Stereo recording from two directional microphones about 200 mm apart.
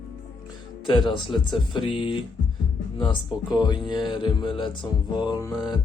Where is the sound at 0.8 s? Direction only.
25° left (ahead or behind).